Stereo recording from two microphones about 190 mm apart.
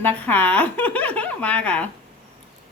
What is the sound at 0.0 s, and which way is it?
Speech, 10° left (ahead or behind).